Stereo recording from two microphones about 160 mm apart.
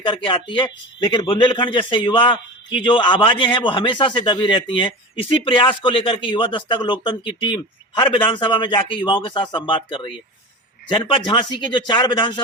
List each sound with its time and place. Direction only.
0.0 s speech: 30° left (ahead or behind)